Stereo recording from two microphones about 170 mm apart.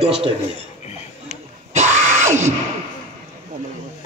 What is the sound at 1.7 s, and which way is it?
Music, 45° right (ahead or behind).